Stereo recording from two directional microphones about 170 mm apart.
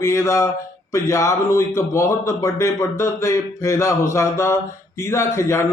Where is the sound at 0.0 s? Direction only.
20° left (ahead or behind).